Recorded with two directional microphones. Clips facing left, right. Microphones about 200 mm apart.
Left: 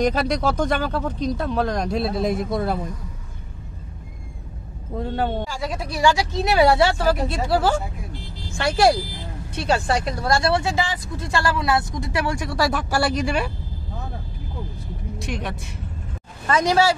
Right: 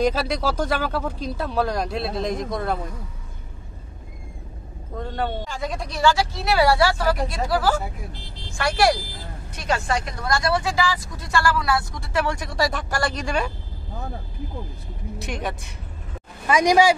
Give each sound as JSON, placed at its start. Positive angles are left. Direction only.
{"t": 0.6, "sound": "speech", "side_deg": -5}
{"t": 4.9, "sound": "speech", "side_deg": 5}
{"t": 15.1, "sound": "speech", "side_deg": 0}
{"t": 16.4, "sound": "speech", "side_deg": -15}